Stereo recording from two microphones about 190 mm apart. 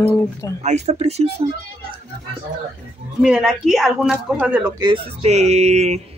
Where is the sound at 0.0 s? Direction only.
15° left (ahead or behind).